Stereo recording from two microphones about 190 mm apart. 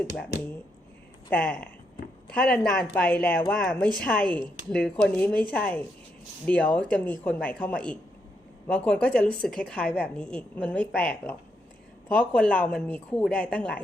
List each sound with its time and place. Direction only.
1.3 s a woman's voice: 10° left (ahead or behind)